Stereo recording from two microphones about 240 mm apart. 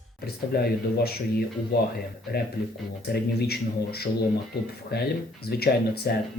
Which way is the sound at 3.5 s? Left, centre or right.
Left.